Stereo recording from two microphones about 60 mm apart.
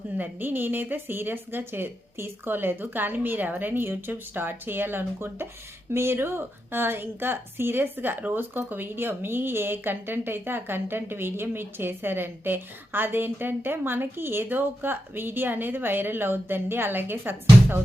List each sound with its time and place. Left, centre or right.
0.2 s a woman's voice: right